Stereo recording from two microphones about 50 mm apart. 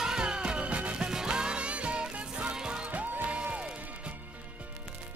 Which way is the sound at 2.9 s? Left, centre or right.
Right.